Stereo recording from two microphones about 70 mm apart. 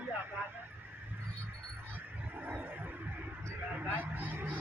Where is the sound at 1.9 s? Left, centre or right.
Right.